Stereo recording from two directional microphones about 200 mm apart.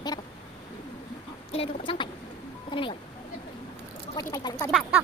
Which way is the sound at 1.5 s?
30° left (ahead or behind).